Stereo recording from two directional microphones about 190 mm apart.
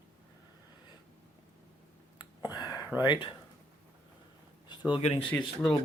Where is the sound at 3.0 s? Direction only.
25° left (ahead or behind).